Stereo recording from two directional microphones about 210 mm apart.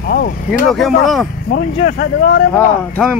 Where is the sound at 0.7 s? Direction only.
Centre (ahead or behind).